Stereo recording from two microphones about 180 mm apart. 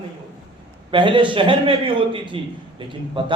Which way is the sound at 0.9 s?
25° right (ahead or behind).